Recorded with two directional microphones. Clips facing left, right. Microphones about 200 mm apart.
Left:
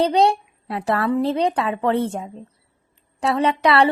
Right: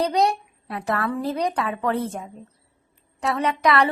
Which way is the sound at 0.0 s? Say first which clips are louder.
Left 4 dB; 30° left (ahead or behind).